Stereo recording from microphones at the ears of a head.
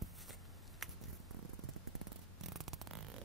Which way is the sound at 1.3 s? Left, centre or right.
Right.